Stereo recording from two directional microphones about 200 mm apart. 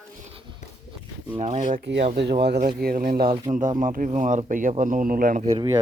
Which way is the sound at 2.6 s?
45° right (ahead or behind).